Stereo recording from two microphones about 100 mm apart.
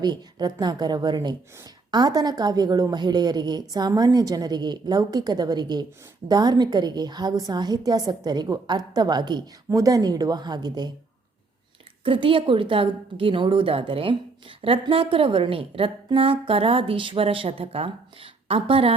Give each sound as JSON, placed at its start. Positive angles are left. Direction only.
{"t": 0.0, "sound": "a woman's voice", "side_deg": -45}
{"t": 12.0, "sound": "a woman's voice", "side_deg": -60}